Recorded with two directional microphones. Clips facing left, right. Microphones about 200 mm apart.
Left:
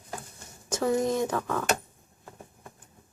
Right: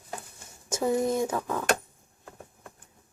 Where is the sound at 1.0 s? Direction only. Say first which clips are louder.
Even; 5° right (ahead or behind).